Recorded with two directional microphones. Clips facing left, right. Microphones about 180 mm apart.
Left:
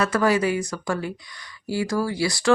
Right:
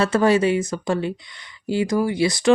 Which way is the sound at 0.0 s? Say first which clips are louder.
Right 3 dB; 25° right (ahead or behind).